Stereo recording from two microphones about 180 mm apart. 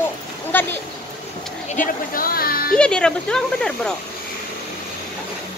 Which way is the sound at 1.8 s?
50° left (ahead or behind).